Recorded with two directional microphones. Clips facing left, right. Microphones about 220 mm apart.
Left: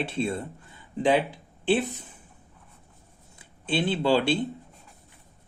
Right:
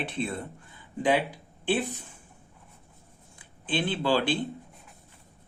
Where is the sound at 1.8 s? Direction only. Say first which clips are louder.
Even; 20° left (ahead or behind).